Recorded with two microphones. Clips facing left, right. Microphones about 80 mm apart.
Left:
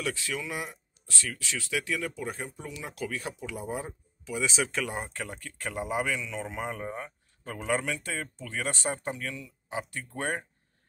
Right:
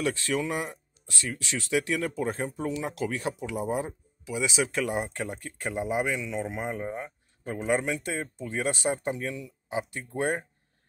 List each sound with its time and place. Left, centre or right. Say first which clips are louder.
0.3 s speech: right 6 dB; right
1.1 s speech: right 2 dB; right